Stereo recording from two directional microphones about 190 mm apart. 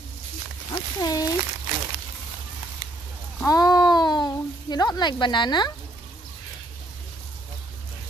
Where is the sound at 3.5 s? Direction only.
20° left (ahead or behind).